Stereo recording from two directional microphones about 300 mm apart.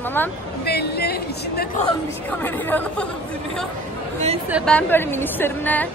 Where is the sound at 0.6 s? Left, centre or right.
Left.